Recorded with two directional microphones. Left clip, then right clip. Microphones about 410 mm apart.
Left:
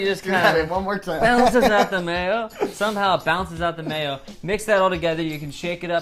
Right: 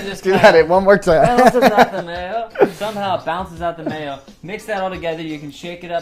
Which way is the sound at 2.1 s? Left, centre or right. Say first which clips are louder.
Left 3 dB; left.